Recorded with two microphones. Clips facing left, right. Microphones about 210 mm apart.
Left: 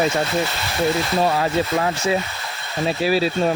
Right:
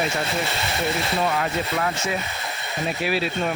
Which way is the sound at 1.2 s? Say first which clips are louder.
Left 5 dB; 30° left (ahead or behind).